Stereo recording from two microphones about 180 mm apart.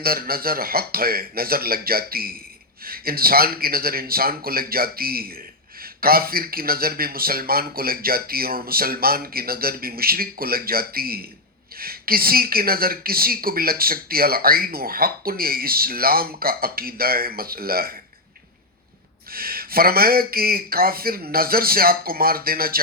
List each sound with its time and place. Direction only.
0.0 s speech: 55° right (ahead or behind)
19.3 s speech: 55° right (ahead or behind)